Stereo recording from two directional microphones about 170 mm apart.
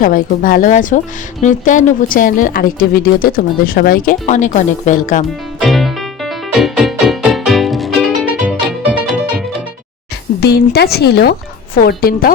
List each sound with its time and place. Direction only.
0.0 s speech: 55° left (ahead or behind)
5.5 s music: centre (ahead or behind)
10.4 s speech: 70° left (ahead or behind)